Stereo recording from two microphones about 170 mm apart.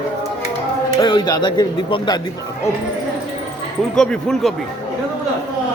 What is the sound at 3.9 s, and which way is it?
Speech, 5° left (ahead or behind).